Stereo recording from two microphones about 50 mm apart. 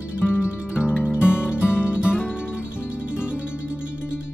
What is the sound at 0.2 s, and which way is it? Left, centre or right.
Music, left.